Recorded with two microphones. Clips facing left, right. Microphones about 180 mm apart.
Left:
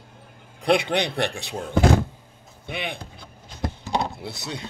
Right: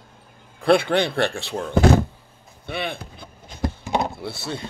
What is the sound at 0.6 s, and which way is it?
Speech, 20° left (ahead or behind).